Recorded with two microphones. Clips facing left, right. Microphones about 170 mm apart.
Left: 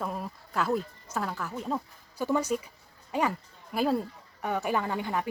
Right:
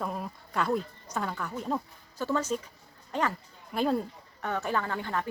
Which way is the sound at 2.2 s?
15° left (ahead or behind).